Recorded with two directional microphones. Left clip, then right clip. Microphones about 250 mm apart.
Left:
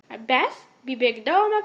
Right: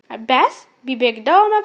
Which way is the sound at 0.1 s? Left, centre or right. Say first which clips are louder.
Right 7 dB; right.